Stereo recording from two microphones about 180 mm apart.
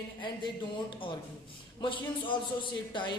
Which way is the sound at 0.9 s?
30° left (ahead or behind).